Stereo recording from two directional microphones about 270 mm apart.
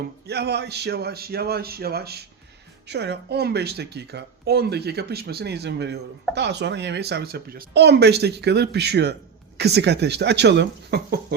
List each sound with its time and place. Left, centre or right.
0.3 s speech: right